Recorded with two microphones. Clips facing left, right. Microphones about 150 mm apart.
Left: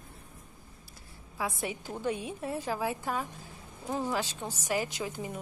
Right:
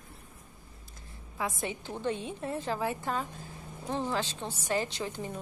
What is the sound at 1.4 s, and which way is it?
A woman's voice, 5° left (ahead or behind).